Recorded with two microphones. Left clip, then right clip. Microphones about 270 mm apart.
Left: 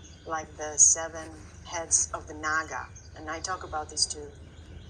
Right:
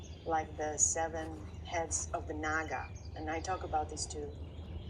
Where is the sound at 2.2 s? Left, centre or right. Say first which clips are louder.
Left 6 dB; centre.